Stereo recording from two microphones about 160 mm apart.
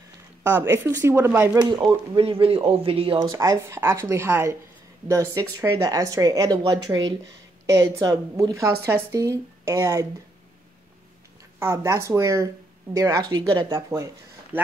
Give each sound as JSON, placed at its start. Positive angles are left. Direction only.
{"t": 0.4, "sound": "speech", "side_deg": -15}
{"t": 1.6, "sound": "speech", "side_deg": -30}
{"t": 11.6, "sound": "speech", "side_deg": -20}
{"t": 13.7, "sound": "speech", "side_deg": -20}